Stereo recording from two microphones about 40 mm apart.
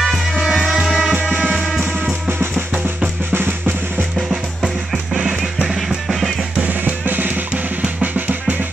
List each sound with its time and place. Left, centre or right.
0.0 s music: centre
0.7 s music: centre
3.3 s drum: right
4.3 s drum kit: centre
5.4 s music: centre
6.6 s drum: right